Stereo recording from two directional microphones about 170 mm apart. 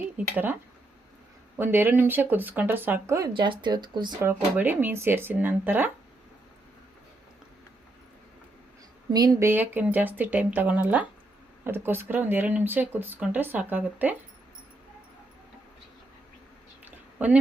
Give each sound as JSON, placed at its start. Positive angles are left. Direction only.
{"t": 1.5, "sound": "speech", "side_deg": -10}
{"t": 3.3, "sound": "speech", "side_deg": -30}
{"t": 4.2, "sound": "speech", "side_deg": -10}
{"t": 9.1, "sound": "speech", "side_deg": -20}
{"t": 16.8, "sound": "a sound", "side_deg": -10}